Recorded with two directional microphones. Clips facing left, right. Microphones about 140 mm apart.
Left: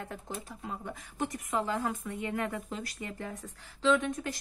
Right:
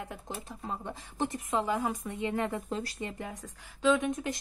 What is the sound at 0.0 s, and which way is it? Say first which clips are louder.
Speech: even; 15° right (ahead or behind).